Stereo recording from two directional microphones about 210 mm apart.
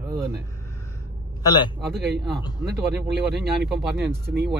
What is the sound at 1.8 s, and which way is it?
Speech, 50° right (ahead or behind).